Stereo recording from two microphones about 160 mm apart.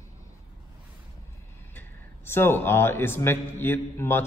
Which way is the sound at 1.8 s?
15° left (ahead or behind).